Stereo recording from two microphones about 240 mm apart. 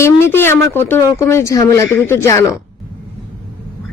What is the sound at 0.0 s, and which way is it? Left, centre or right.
Speech, centre.